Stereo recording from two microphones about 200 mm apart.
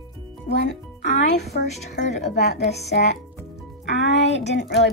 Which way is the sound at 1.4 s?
55° left (ahead or behind).